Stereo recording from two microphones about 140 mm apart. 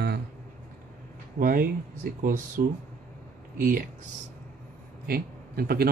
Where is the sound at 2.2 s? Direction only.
75° right (ahead or behind).